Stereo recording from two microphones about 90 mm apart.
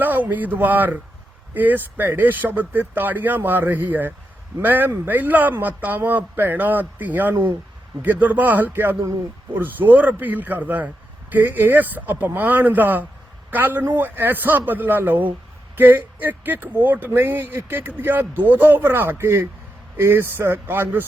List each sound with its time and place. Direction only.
0.0 s a man's voice: 20° right (ahead or behind)